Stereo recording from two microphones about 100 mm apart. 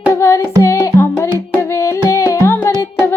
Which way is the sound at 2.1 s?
30° left (ahead or behind).